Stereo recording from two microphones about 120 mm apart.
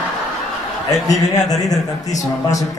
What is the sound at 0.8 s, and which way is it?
A man's voice, 30° left (ahead or behind).